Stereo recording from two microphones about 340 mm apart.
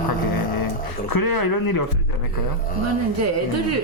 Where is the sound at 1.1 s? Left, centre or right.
Left.